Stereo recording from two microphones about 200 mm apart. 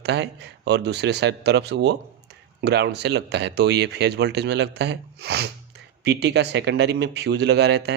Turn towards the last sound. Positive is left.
turn(degrees=-55)  # may be behind; listen again after turning